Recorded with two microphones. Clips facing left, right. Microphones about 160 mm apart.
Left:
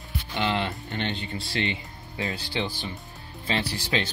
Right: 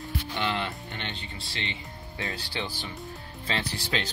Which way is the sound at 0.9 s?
40° left (ahead or behind).